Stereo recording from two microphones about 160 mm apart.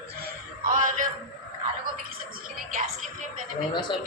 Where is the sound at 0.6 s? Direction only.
55° right (ahead or behind).